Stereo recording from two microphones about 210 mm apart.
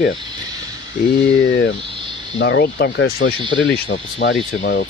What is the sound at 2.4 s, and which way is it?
Speech, 55° left (ahead or behind).